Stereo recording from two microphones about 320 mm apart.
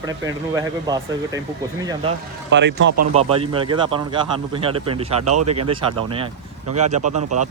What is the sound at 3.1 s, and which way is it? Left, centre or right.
Speech, centre.